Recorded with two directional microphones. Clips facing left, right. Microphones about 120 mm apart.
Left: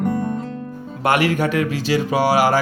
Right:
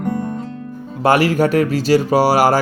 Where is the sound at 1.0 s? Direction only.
35° right (ahead or behind).